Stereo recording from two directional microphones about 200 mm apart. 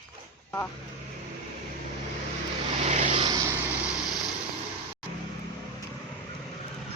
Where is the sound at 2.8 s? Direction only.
40° right (ahead or behind).